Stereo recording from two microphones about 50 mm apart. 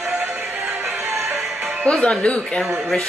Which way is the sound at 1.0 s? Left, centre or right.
Right.